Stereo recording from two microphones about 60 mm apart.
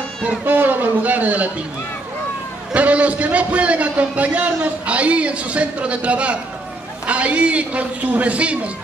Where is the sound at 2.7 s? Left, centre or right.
Right.